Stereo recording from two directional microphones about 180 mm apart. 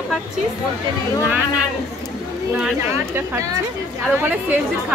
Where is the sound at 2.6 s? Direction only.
15° right (ahead or behind).